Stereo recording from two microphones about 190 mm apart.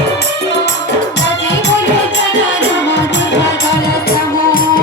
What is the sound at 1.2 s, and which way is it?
Music, 65° left (ahead or behind).